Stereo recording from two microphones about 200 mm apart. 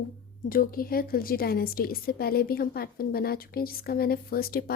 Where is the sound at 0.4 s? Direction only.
45° left (ahead or behind).